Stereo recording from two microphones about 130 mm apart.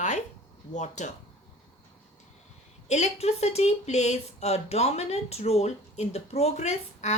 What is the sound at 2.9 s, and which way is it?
Speech, 60° left (ahead or behind).